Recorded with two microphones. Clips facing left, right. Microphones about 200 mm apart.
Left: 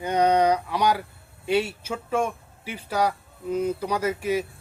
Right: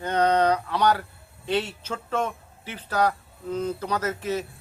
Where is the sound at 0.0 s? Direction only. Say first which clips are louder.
Left 1 dB; 10° left (ahead or behind).